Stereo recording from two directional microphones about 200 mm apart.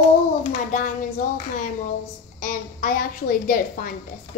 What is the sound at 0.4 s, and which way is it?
Hands, 35° left (ahead or behind).